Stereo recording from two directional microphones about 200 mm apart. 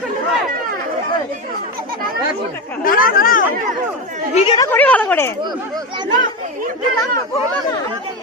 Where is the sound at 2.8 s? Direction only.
45° left (ahead or behind).